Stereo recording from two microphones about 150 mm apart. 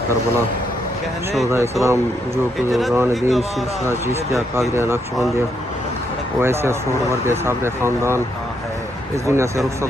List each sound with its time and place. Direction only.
1.5 s speech: 20° right (ahead or behind)
3.2 s speech: centre (ahead or behind)
3.8 s speech: 20° right (ahead or behind)
6.4 s speech: 15° right (ahead or behind)
9.2 s speech: 20° right (ahead or behind)